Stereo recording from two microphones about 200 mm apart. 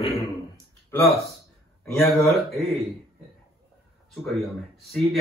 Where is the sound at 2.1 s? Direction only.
Centre (ahead or behind).